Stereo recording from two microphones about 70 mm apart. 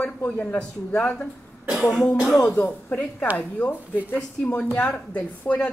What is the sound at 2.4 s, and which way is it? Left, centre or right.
A woman's voice, centre.